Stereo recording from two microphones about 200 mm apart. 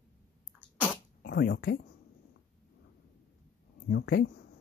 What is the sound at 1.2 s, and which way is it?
Speech, 55° left (ahead or behind).